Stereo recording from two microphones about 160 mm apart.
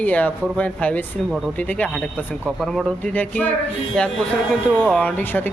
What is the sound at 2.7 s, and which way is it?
Speech, 10° left (ahead or behind).